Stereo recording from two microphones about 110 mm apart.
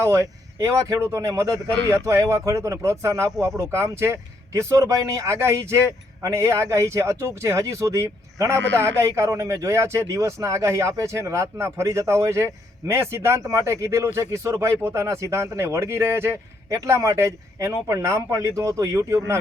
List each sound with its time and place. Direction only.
0.6 s speech: 25° right (ahead or behind)